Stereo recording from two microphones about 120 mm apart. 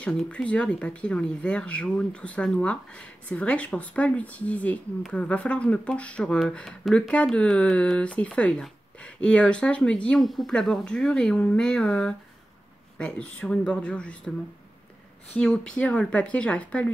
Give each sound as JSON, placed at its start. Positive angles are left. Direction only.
{"t": 0.3, "sound": "speech", "side_deg": 10}
{"t": 15.3, "sound": "speech", "side_deg": 10}